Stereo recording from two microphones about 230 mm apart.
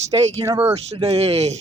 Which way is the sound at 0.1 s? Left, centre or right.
Right.